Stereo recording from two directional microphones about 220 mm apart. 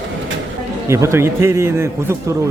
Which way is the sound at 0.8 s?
10° right (ahead or behind).